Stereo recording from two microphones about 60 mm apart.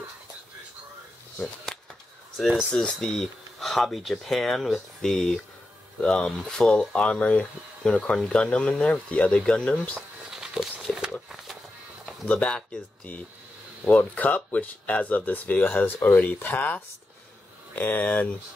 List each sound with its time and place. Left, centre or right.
2.3 s speech: centre
10.3 s a sound: centre
12.3 s speech: centre
13.8 s speech: left